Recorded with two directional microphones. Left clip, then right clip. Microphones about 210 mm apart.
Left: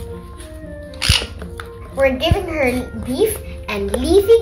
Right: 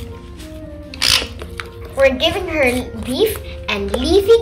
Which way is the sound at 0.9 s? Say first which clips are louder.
Right 3 dB; 40° right (ahead or behind).